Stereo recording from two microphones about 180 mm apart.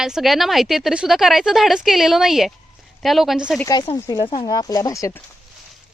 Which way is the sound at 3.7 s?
20° left (ahead or behind).